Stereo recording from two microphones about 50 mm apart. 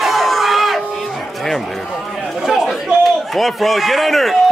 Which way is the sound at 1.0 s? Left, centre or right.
Centre.